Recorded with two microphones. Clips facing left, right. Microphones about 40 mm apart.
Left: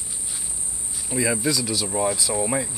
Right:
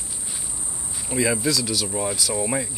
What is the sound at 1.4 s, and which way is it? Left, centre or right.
Speech, centre.